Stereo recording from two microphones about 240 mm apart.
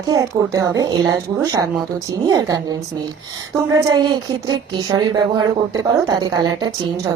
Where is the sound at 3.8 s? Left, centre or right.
Centre.